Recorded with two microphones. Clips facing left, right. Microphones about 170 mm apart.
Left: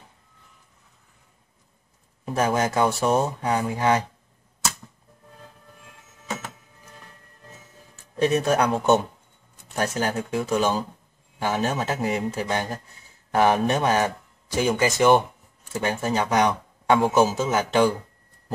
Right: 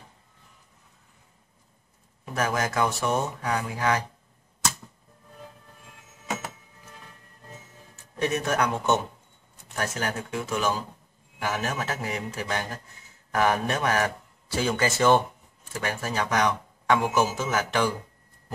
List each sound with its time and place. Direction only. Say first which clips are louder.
2.2 s speech: left 5 dB; 30° left (ahead or behind)
8.2 s speech: left 5 dB; 30° left (ahead or behind)